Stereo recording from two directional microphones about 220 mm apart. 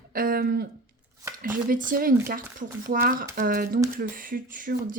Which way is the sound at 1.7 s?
40° right (ahead or behind).